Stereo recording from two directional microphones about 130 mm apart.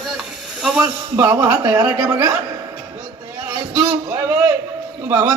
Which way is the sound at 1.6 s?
15° right (ahead or behind).